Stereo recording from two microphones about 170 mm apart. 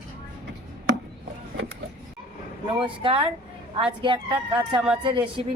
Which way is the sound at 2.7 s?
30° right (ahead or behind).